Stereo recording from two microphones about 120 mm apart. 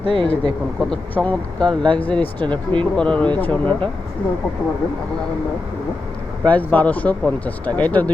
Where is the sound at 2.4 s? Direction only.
40° right (ahead or behind).